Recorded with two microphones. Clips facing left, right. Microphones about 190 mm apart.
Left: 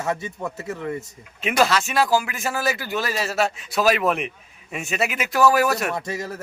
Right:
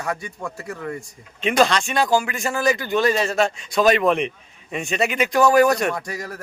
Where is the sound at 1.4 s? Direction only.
5° left (ahead or behind).